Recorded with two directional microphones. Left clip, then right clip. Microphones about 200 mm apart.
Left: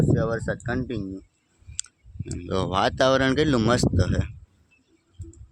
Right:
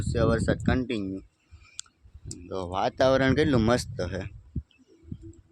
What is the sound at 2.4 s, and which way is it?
Speech, 35° left (ahead or behind).